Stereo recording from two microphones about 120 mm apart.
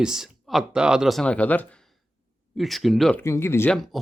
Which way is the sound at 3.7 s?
Centre (ahead or behind).